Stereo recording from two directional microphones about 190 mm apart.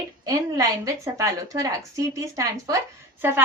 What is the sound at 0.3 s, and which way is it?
A woman's voice, 15° right (ahead or behind).